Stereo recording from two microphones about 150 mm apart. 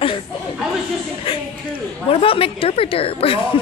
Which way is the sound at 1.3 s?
35° left (ahead or behind).